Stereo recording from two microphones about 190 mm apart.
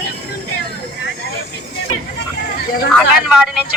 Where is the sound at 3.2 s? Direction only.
5° right (ahead or behind).